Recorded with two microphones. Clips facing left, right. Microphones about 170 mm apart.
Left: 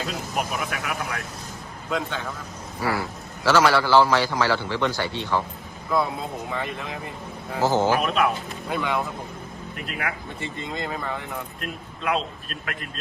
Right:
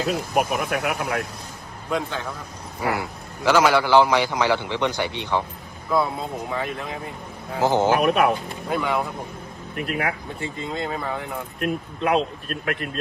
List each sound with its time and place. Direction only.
0.1 s speech: 55° right (ahead or behind)
1.9 s speech: centre (ahead or behind)
2.8 s a man's voice: 20° right (ahead or behind)
6.5 s speech: centre (ahead or behind)
7.6 s speech: 15° right (ahead or behind)
7.9 s speech: 50° right (ahead or behind)
8.7 s speech: centre (ahead or behind)
9.7 s speech: 50° right (ahead or behind)
10.4 s speech: centre (ahead or behind)
11.6 s speech: 50° right (ahead or behind)